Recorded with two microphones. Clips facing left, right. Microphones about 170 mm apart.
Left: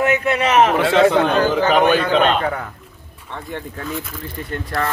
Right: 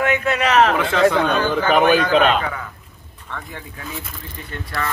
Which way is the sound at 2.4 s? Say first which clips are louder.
Left 5 dB; 45° left (ahead or behind).